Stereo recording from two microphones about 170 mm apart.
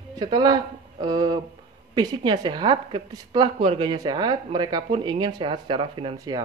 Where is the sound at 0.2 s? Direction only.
25° right (ahead or behind).